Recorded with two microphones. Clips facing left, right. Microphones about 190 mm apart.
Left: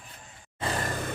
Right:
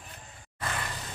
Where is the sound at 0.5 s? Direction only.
30° left (ahead or behind).